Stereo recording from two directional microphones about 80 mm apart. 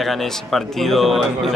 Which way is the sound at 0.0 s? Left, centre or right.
Centre.